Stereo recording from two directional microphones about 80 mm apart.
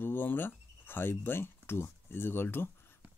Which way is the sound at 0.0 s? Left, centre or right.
Left.